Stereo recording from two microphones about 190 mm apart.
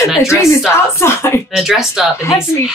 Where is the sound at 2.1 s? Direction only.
15° left (ahead or behind).